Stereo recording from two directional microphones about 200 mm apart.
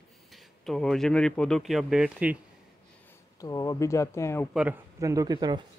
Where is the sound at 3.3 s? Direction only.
15° left (ahead or behind).